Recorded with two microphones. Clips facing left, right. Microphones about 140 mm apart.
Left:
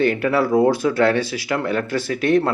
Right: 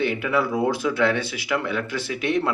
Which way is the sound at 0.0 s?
45° left (ahead or behind).